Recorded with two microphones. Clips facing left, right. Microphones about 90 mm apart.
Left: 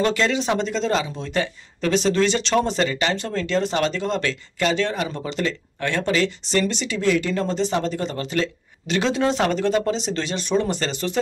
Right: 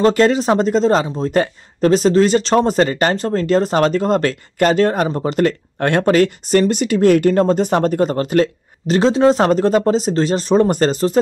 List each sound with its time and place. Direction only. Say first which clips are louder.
0.0 s speech: right 8 dB; 45° right (ahead or behind)